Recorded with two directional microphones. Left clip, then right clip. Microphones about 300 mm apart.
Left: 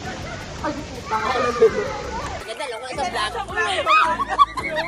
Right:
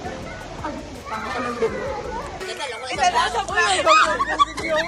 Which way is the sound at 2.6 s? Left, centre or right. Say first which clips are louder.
Right 6 dB; left.